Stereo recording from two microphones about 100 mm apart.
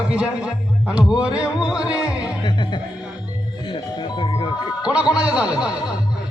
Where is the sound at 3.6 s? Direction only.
55° left (ahead or behind).